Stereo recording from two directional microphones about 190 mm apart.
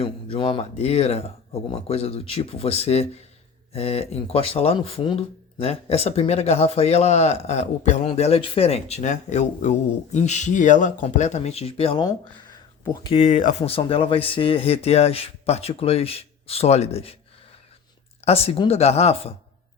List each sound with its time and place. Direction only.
0.0 s speech: 30° left (ahead or behind)
13.1 s speech: 40° left (ahead or behind)
18.3 s speech: 30° left (ahead or behind)